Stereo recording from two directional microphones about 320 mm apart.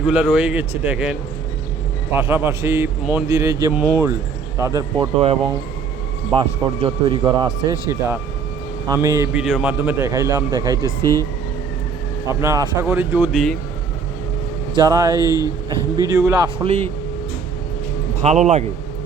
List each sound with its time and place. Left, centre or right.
0.0 s speech: centre
2.1 s a man's voice: centre
11.0 s speech: centre
12.3 s a man's voice: centre
14.8 s a man's voice: centre
15.2 s speech: centre
16.0 s a man's voice: centre
18.2 s a man's voice: right